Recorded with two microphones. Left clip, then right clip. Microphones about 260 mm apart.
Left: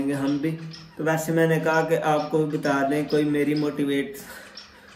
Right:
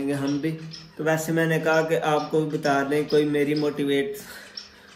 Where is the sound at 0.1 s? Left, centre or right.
Centre.